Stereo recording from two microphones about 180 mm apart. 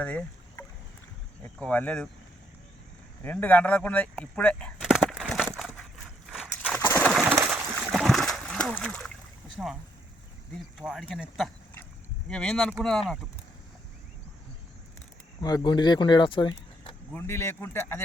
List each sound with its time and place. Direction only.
0.0 s rowboat: 10° left (ahead or behind)
1.5 s speech: 5° left (ahead or behind)
3.2 s speech: 10° left (ahead or behind)
4.9 s a sound: centre (ahead or behind)
5.5 s crushing: 5° left (ahead or behind)
6.3 s a sound: 5° right (ahead or behind)
6.7 s bird: 10° left (ahead or behind)
7.4 s splash: centre (ahead or behind)
9.6 s speech: centre (ahead or behind)
15.4 s speech: 20° left (ahead or behind)
17.2 s speech: 15° left (ahead or behind)